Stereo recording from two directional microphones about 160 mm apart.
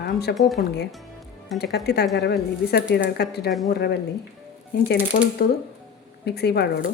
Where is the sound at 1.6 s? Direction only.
90° left.